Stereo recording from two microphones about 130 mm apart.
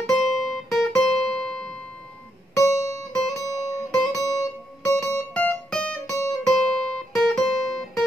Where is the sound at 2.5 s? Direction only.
25° left (ahead or behind).